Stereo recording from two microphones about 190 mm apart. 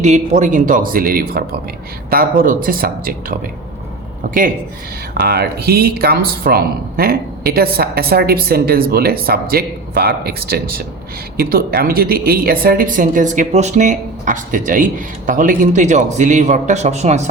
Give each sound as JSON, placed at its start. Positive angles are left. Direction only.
{"t": 0.0, "sound": "a woman's voice", "side_deg": -40}
{"t": 5.2, "sound": "a woman's voice", "side_deg": -55}